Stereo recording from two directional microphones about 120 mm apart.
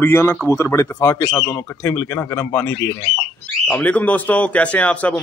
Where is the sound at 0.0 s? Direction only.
20° left (ahead or behind).